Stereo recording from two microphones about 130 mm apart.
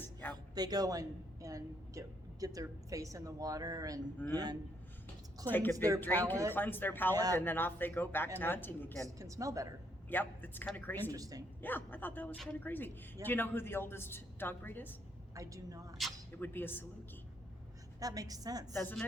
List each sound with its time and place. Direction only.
0.0 s a sound: 15° left (ahead or behind)
0.5 s a woman's voice: 30° right (ahead or behind)
5.5 s a woman's voice: 15° left (ahead or behind)
5.7 s a woman's voice: 25° right (ahead or behind)
6.0 s a woman's voice: 15° left (ahead or behind)
9.0 s a woman's voice: 25° right (ahead or behind)
10.1 s a woman's voice: 15° left (ahead or behind)
11.1 s a woman's voice: 25° right (ahead or behind)
11.6 s a woman's voice: 15° left (ahead or behind)
15.4 s a woman's voice: 25° right (ahead or behind)
16.4 s a woman's voice: 15° left (ahead or behind)
18.0 s a woman's voice: 30° right (ahead or behind)
18.7 s a woman's voice: 15° left (ahead or behind)